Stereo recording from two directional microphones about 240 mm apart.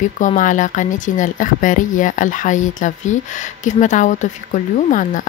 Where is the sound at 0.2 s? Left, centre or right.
Left.